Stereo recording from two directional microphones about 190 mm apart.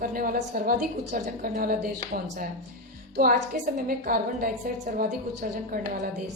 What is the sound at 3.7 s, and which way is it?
A woman's voice, 45° right (ahead or behind).